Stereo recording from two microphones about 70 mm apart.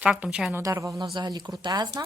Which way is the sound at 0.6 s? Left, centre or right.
Right.